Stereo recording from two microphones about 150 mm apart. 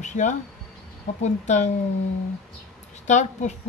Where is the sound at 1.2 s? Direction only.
50° left (ahead or behind).